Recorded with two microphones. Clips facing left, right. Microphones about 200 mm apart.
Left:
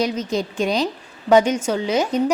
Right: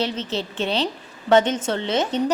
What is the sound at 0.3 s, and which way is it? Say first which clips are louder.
A woman's voice: left 4 dB; 15° left (ahead or behind).